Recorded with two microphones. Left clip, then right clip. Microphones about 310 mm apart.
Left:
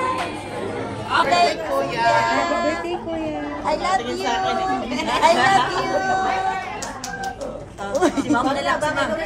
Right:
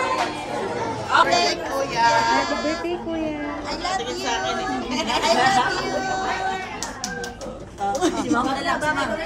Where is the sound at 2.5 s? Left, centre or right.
Centre.